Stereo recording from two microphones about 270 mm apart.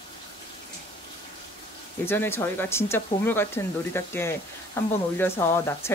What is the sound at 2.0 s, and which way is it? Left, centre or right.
Speech, centre.